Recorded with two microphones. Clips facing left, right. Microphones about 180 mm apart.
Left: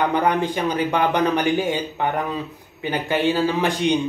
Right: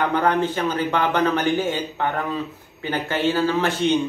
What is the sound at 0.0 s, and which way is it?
A man's voice, 15° left (ahead or behind).